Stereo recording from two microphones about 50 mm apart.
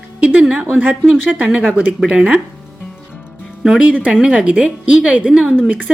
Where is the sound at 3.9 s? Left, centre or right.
Right.